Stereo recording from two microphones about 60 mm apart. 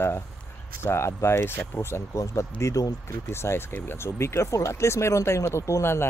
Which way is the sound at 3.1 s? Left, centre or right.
Left.